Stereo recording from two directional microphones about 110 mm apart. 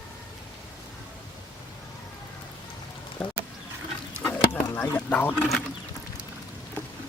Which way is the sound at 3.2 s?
15° left (ahead or behind).